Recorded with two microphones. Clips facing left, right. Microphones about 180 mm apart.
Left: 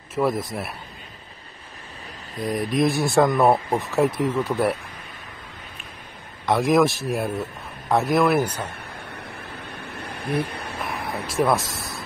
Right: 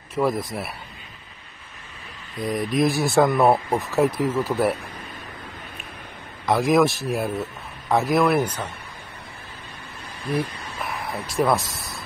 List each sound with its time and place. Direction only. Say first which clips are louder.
0.1 s speech: even; centre (ahead or behind)
2.3 s speech: even; centre (ahead or behind)
6.4 s speech: even; centre (ahead or behind)
9.7 s a sound: left 6 dB; 65° left (ahead or behind)
11.2 s speech: even; centre (ahead or behind)